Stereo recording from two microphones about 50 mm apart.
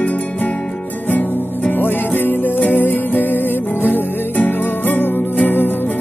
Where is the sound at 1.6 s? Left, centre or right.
Left.